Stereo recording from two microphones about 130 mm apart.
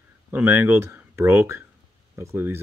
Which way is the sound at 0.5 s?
20° right (ahead or behind).